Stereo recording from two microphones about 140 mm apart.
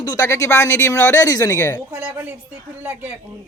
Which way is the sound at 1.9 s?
10° right (ahead or behind).